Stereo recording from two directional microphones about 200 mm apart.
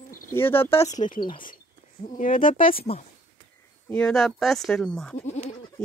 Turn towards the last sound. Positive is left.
turn(degrees=35)  # may be behind; listen again after turning